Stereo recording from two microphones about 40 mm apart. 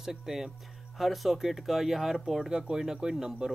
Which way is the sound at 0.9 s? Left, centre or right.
Centre.